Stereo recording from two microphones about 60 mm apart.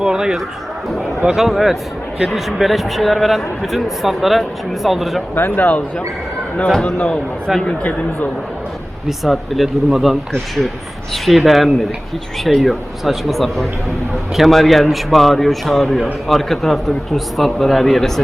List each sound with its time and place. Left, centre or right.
0.0 s a man's voice: centre
5.3 s speech: left
6.7 s a man's voice: centre
7.6 s speech: left
9.0 s a man's voice: centre